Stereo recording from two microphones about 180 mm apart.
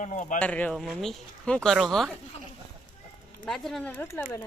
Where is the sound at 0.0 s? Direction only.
45° left (ahead or behind).